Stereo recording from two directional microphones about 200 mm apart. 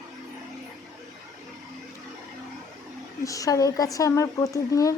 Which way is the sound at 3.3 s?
15° left (ahead or behind).